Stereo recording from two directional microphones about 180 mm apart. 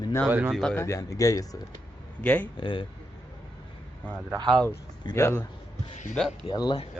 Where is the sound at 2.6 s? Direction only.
25° left (ahead or behind).